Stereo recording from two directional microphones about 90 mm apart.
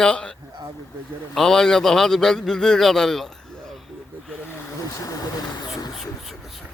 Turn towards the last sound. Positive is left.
turn(degrees=45)  # may be behind; listen again after turning